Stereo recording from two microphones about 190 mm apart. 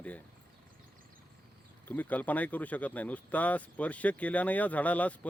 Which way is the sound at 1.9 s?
10° left (ahead or behind).